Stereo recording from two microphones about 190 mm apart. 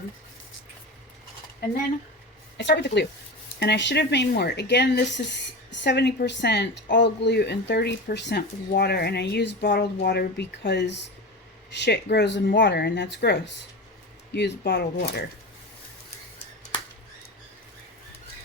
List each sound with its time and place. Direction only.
2.6 s a woman's voice: 65° left (ahead or behind)